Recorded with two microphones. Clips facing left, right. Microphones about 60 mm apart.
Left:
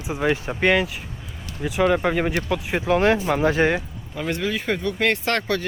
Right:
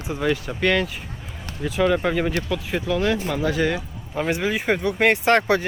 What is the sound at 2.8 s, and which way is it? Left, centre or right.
Speech, left.